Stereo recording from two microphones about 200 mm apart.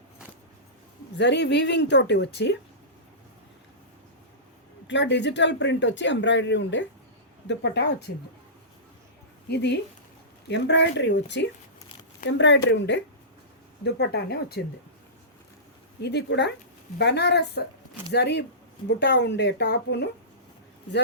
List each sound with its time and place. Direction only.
1.1 s speech: 60° left (ahead or behind)
4.9 s speech: 60° left (ahead or behind)
9.5 s speech: 60° left (ahead or behind)
16.0 s speech: 55° left (ahead or behind)